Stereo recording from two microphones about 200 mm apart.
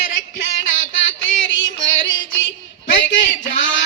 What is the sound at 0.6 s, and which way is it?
Music, 70° left (ahead or behind).